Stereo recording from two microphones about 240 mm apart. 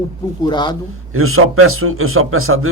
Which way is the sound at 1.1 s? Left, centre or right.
Right.